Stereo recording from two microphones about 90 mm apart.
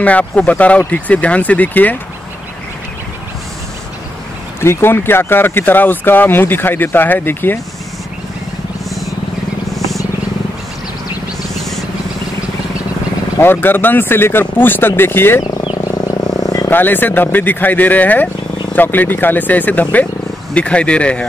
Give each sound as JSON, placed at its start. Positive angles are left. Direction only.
{"t": 0.0, "sound": "speech", "side_deg": 15}
{"t": 4.6, "sound": "speech", "side_deg": 25}
{"t": 13.4, "sound": "speech", "side_deg": 25}
{"t": 16.1, "sound": "vehicle", "side_deg": 45}
{"t": 16.6, "sound": "speech", "side_deg": 20}